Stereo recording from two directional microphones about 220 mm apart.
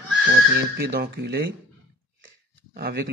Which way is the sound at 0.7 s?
45° right (ahead or behind).